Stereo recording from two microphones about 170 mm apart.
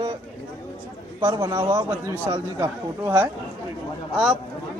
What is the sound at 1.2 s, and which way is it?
A man's voice, 20° right (ahead or behind).